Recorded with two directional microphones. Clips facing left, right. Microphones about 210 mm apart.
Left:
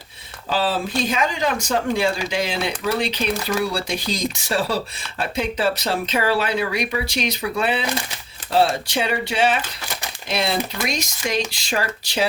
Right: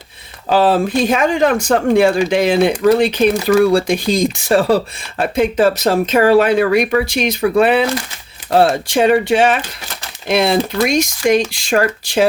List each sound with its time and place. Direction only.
0.5 s speech: 60° right (ahead or behind)